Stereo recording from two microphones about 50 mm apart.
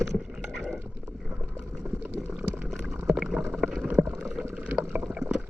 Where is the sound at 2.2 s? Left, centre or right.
Right.